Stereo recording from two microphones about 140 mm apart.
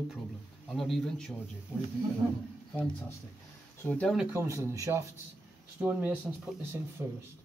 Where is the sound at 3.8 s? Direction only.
10° left (ahead or behind).